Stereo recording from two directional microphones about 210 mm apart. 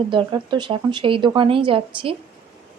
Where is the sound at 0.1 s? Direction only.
20° right (ahead or behind).